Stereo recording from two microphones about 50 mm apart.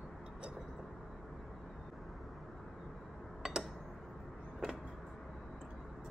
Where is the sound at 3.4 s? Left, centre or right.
Centre.